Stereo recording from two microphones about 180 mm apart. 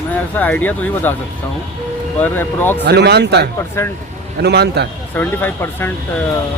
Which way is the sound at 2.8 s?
65° right (ahead or behind).